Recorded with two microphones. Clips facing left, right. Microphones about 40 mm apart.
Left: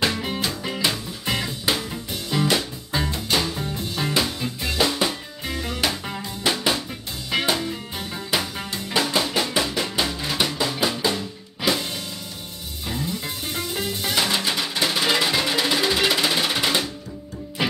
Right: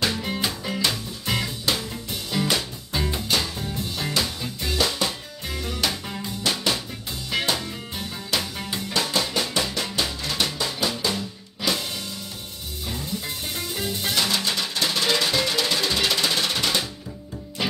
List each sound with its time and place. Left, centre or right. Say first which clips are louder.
0.0 s music: left 1 dB; centre
12.8 s music: left 3 dB; centre
14.1 s music: left 2 dB; centre